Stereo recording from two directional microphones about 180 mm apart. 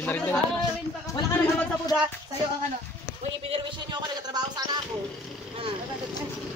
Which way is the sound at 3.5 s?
25° right (ahead or behind).